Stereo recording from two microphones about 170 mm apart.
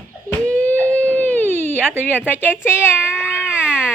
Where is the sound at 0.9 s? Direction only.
10° left (ahead or behind).